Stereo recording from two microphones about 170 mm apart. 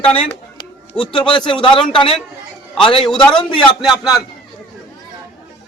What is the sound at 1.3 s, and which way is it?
Speech, 30° left (ahead or behind).